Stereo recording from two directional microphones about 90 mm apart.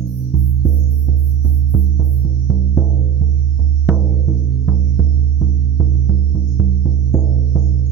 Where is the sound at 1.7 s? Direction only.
Centre (ahead or behind).